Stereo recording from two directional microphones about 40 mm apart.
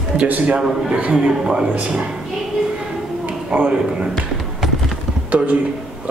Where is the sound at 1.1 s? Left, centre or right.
Centre.